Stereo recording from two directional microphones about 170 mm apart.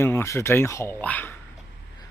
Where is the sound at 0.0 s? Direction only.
15° left (ahead or behind).